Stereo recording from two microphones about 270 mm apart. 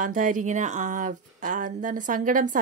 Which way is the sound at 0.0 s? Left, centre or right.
Right.